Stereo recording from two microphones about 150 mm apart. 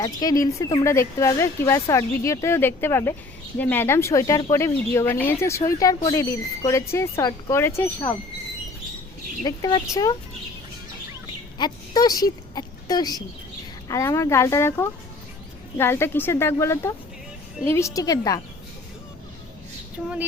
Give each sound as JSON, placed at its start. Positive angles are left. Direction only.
{"t": 0.0, "sound": "speech", "side_deg": 25}
{"t": 9.4, "sound": "speech", "side_deg": 25}
{"t": 11.5, "sound": "speech", "side_deg": 25}
{"t": 20.0, "sound": "a sound", "side_deg": -10}